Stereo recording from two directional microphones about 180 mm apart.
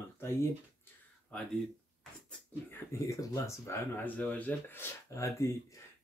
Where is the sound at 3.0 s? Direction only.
15° left (ahead or behind).